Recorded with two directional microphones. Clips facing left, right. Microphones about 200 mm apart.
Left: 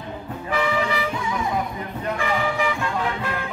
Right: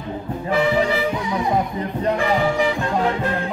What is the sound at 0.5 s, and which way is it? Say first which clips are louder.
Music: right 5 dB; 35° right (ahead or behind).